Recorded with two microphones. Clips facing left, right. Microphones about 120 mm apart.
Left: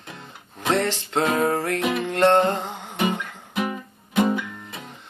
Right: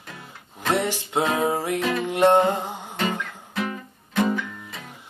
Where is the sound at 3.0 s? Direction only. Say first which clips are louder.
Left 3 dB; 15° left (ahead or behind).